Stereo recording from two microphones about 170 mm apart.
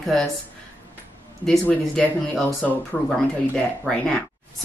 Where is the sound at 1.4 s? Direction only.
5° left (ahead or behind).